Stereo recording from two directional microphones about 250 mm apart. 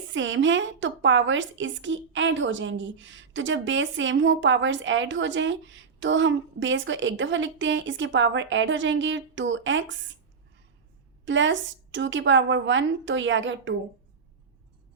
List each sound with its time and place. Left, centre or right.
0.1 s a woman's voice: right
11.3 s a woman's voice: right